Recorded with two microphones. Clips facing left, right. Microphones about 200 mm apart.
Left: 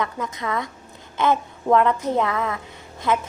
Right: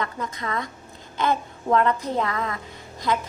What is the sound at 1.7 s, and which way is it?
Speech, 20° left (ahead or behind).